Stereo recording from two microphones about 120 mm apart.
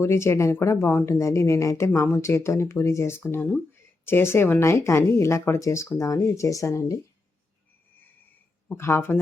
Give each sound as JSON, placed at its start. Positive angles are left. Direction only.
{"t": 0.0, "sound": "speech", "side_deg": 20}
{"t": 8.7, "sound": "speech", "side_deg": 20}